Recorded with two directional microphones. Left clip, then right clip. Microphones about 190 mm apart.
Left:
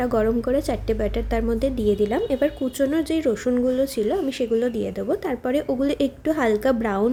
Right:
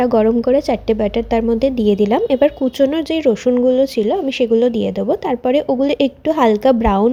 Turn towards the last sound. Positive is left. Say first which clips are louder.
# right 8 dB
turn(degrees=-25)  # may be behind; listen again after turning